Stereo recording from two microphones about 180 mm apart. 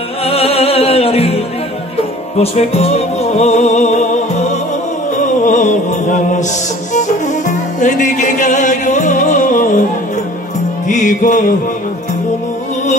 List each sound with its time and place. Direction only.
0.2 s music: 35° left (ahead or behind)
5.1 s music: 45° left (ahead or behind)
10.9 s music: 45° left (ahead or behind)